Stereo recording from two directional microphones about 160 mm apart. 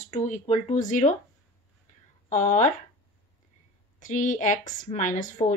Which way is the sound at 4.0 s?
55° left (ahead or behind).